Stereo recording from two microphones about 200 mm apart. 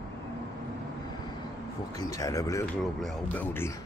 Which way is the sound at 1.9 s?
20° left (ahead or behind).